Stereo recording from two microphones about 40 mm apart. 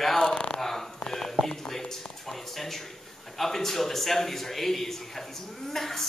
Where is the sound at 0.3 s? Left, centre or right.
Left.